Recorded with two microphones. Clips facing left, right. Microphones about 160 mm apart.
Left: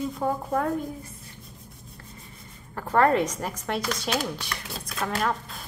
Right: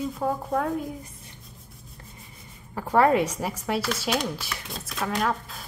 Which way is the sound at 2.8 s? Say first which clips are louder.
Right 1 dB; 10° right (ahead or behind).